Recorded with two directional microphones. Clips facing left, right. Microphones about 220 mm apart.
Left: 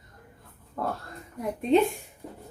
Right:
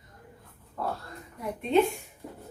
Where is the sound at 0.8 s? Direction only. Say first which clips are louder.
Left 2 dB; 50° left (ahead or behind).